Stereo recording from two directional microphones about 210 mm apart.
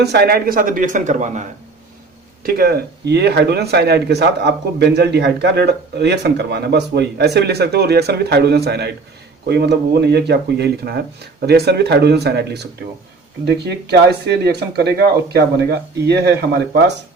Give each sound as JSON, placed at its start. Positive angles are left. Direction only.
{"t": 0.0, "sound": "speech", "side_deg": -50}
{"t": 2.4, "sound": "a man's voice", "side_deg": -45}